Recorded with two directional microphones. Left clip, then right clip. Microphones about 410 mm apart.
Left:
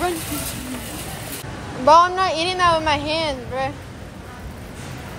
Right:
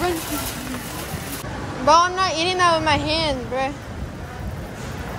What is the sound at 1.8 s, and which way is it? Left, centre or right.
A woman's voice, centre.